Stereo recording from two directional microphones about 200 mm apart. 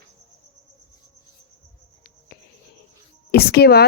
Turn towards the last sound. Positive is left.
turn(degrees=55)  # may be behind; listen again after turning